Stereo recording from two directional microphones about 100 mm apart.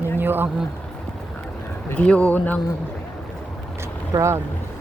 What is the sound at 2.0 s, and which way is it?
Speech, 10° left (ahead or behind).